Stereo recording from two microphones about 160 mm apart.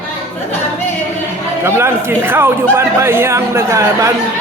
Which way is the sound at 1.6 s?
15° right (ahead or behind).